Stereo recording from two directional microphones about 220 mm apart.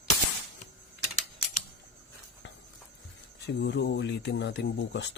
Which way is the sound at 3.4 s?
50° left (ahead or behind).